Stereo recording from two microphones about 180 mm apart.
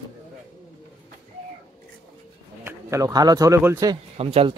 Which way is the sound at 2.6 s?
15° right (ahead or behind).